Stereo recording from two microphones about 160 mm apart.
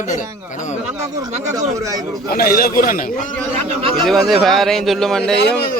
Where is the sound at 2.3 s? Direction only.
70° left (ahead or behind).